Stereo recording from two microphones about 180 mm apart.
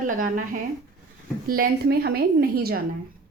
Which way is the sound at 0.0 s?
50° right (ahead or behind).